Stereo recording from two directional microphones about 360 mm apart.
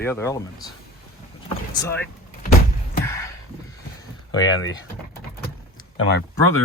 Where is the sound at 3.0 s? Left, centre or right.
Centre.